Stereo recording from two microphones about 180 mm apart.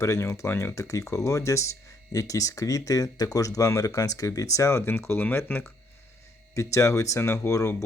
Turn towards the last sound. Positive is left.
turn(degrees=15)  # may be behind; listen again after turning